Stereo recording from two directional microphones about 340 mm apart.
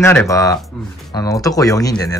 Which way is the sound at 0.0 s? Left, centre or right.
Centre.